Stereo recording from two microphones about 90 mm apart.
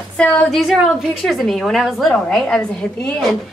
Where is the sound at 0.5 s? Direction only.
Centre (ahead or behind).